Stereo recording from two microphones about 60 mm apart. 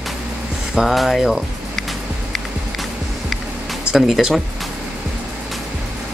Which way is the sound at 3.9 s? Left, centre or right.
Centre.